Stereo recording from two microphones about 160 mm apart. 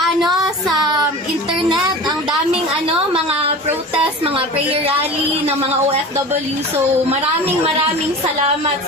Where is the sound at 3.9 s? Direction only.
35° right (ahead or behind).